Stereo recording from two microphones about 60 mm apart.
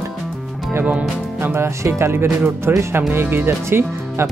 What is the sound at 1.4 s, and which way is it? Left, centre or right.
Speech, right.